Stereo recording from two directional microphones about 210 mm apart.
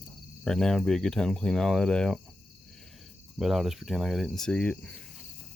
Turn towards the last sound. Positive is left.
turn(degrees=5)  # may be behind; listen again after turning